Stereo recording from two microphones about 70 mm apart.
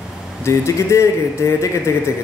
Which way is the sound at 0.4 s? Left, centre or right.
Left.